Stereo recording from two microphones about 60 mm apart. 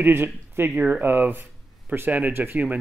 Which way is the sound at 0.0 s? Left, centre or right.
Right.